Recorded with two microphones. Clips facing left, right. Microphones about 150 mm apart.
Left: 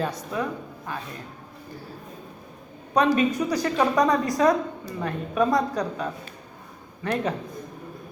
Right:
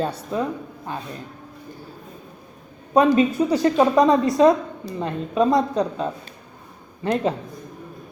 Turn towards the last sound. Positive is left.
turn(degrees=-30)  # may be behind; listen again after turning